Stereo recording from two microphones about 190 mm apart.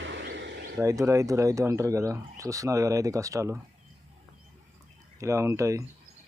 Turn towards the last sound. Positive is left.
turn(degrees=-15)  # may be behind; listen again after turning